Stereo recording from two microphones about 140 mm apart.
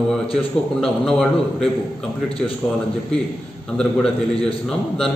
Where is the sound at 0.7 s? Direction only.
5° left (ahead or behind).